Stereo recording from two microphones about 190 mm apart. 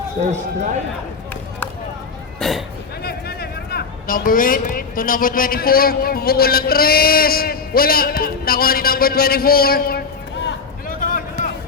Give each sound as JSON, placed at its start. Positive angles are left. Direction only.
{"t": 0.3, "sound": "a man's voice", "side_deg": -40}
{"t": 1.3, "sound": "run", "side_deg": 10}
{"t": 2.4, "sound": "speech", "side_deg": 0}
{"t": 3.0, "sound": "speech", "side_deg": 55}
{"t": 10.4, "sound": "a sound", "side_deg": 45}